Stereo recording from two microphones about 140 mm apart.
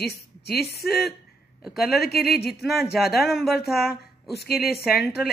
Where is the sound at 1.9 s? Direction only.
90° left.